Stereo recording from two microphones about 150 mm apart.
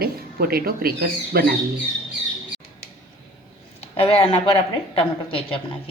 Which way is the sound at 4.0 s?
40° left (ahead or behind).